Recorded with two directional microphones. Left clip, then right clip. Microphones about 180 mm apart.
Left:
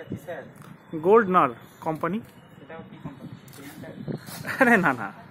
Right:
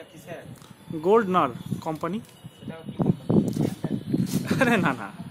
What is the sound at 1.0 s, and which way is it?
Speech, 5° right (ahead or behind).